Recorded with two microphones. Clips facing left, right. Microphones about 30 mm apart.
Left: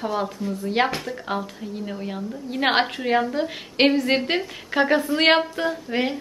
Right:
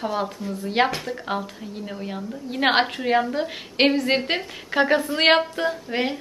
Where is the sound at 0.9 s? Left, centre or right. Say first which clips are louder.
Even; centre.